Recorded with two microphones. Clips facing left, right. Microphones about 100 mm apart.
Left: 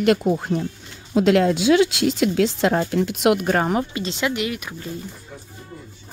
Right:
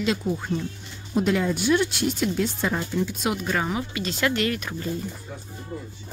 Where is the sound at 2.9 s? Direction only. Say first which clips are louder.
Left 7 dB; 75° left (ahead or behind); by 3.9 s 50° left (ahead or behind).